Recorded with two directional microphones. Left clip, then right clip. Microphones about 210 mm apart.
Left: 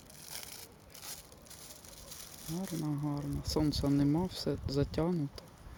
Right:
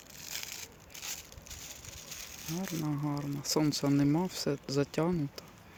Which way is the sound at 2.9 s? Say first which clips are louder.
Right 2 dB; centre (ahead or behind).